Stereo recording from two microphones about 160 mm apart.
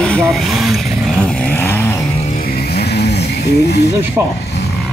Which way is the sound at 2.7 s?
90° left.